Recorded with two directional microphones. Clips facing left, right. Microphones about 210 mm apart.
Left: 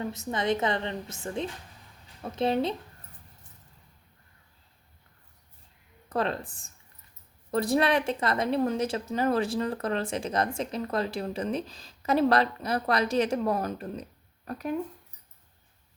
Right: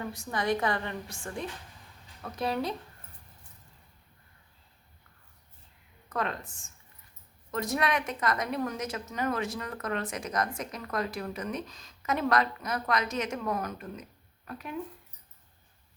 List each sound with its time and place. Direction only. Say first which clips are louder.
0.0 s a woman's voice: left 3 dB; 20° left (ahead or behind)
6.1 s speech: left 4 dB; 30° left (ahead or behind)